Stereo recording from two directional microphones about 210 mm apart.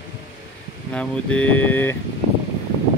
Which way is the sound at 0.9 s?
5° left (ahead or behind).